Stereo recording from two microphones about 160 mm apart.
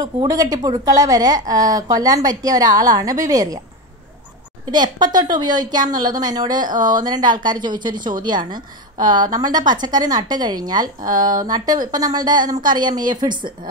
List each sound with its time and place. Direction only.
0.0 s a woman's voice: 25° right (ahead or behind)
4.6 s a woman's voice: 25° right (ahead or behind)
11.1 s speech: 55° right (ahead or behind)
11.4 s a woman's voice: 25° right (ahead or behind)